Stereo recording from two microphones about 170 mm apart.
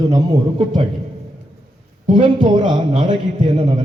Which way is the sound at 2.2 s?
25° right (ahead or behind).